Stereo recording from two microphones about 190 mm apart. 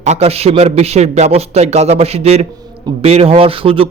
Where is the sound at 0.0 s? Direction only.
35° right (ahead or behind).